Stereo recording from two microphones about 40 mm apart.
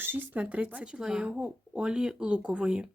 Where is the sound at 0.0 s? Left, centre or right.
Right.